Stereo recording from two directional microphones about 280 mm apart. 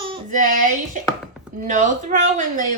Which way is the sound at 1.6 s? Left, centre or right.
Right.